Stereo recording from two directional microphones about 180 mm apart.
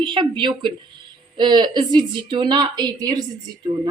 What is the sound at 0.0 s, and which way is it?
Speech, 25° right (ahead or behind).